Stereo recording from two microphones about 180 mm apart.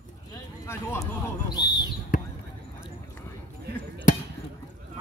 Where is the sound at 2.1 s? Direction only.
45° left (ahead or behind).